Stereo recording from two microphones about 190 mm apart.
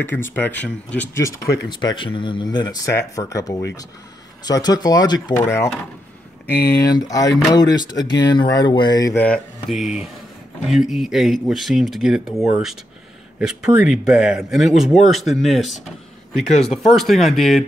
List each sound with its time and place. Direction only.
0.0 s speech: 10° left (ahead or behind)
6.9 s speech: 20° left (ahead or behind); by 17.6 s centre (ahead or behind)